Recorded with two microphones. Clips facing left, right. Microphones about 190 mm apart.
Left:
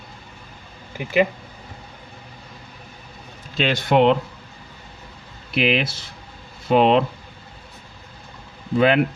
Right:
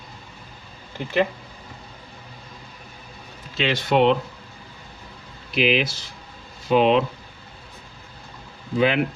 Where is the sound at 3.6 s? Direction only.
55° left (ahead or behind).